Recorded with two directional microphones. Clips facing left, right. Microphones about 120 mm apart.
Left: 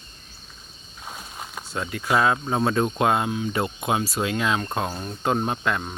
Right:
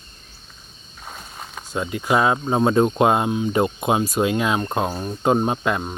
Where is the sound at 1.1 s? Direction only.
5° left (ahead or behind).